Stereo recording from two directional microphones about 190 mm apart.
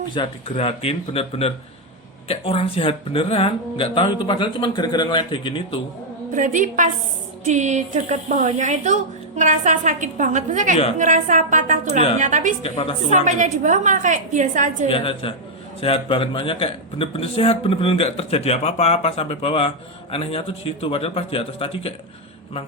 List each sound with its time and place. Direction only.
0.1 s speech: 30° left (ahead or behind)
6.3 s a woman's voice: 45° right (ahead or behind)
12.6 s speech: 30° left (ahead or behind)
13.1 s speech: 40° right (ahead or behind)
14.8 s speech: 30° left (ahead or behind)